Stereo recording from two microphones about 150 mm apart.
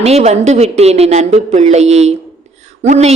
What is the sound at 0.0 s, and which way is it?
Speech, 45° right (ahead or behind).